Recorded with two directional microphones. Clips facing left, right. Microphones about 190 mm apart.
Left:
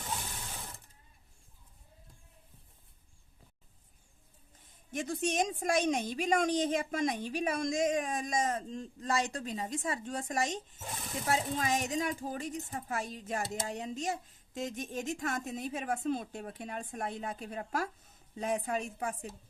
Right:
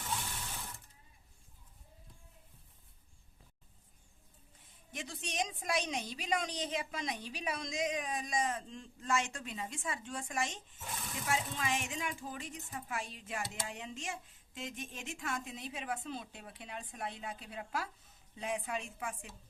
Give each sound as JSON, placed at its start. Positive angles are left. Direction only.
{"t": 4.9, "sound": "a woman's voice", "side_deg": 45}